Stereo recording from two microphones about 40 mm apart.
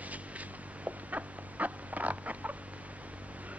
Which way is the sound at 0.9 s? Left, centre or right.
Right.